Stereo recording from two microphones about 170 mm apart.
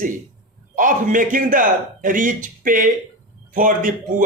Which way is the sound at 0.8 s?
50° right (ahead or behind).